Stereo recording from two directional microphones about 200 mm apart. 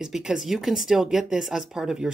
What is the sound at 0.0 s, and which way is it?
Speech, centre (ahead or behind).